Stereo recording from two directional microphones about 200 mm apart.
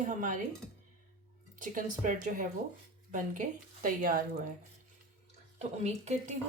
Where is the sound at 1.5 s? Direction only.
40° right (ahead or behind).